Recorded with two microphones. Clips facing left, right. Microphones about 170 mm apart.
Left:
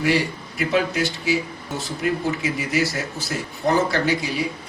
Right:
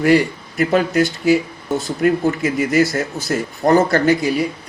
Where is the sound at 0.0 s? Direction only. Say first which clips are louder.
Right 7 dB; 50° right (ahead or behind).